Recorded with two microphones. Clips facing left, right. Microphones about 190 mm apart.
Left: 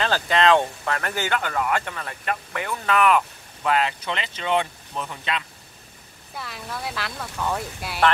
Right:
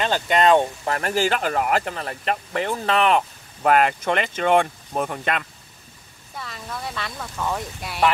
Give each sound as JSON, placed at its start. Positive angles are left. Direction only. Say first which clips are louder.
{"t": 0.0, "sound": "speech", "louder": "right 1 dB", "side_deg": -20}
{"t": 3.6, "sound": "speech", "louder": "right 5 dB", "side_deg": -50}
{"t": 6.3, "sound": "speech", "louder": "even", "side_deg": 0}